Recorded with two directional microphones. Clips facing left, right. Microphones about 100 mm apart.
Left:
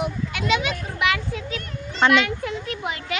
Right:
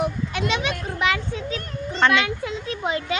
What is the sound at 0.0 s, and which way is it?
A child's voice, 35° right (ahead or behind).